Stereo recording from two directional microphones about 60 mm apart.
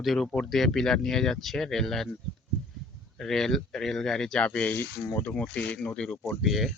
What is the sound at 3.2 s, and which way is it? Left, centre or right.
Speech, centre.